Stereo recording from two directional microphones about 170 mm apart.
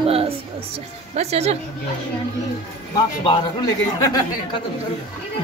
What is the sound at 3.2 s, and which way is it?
Speech, 25° left (ahead or behind).